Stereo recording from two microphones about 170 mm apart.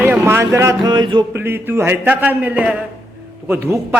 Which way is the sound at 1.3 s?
10° right (ahead or behind).